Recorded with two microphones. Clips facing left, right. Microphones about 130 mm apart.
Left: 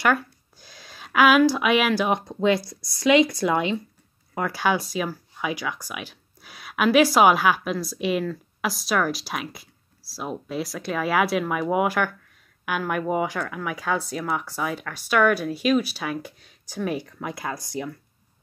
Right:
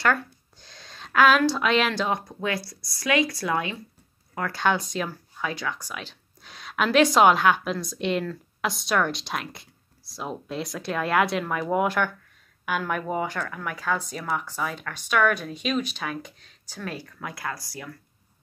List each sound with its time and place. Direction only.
0.0 s a sound: 10° left (ahead or behind)
2.1 s speech: 20° left (ahead or behind)
4.4 s speech: 10° left (ahead or behind)